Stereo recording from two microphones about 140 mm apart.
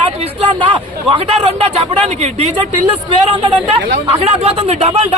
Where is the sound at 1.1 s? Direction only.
45° right (ahead or behind).